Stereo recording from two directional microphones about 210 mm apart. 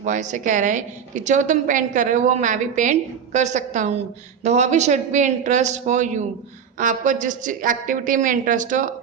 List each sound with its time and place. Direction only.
0.0 s a woman's voice: 35° right (ahead or behind)